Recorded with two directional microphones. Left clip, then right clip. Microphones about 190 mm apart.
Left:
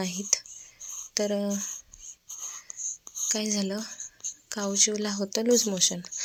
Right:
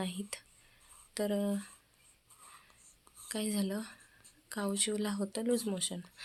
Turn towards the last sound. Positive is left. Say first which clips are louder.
# left 12 dB
turn(degrees=25)  # may be behind; listen again after turning